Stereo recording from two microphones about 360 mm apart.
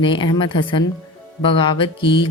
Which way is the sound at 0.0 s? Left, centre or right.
Centre.